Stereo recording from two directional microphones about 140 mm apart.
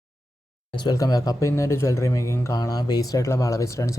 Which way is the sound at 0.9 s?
25° left (ahead or behind).